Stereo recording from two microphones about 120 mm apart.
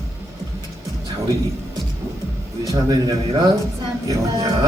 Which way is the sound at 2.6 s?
30° right (ahead or behind).